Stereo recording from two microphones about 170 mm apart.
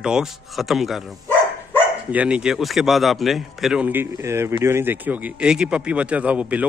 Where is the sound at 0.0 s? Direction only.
5° right (ahead or behind).